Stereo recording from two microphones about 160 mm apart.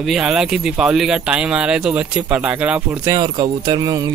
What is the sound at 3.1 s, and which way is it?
Speech, 25° right (ahead or behind).